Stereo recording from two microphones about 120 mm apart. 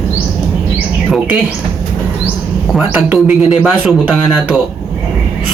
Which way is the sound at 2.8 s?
15° right (ahead or behind).